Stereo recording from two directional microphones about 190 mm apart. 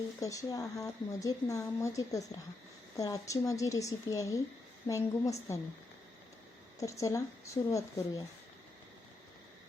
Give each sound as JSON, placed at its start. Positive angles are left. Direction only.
{"t": 0.2, "sound": "a woman's voice", "side_deg": 15}
{"t": 6.7, "sound": "a woman's voice", "side_deg": 15}